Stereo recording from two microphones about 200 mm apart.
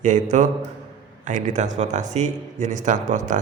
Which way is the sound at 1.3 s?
40° right (ahead or behind).